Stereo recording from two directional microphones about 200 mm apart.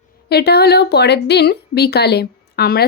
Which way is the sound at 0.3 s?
55° left (ahead or behind).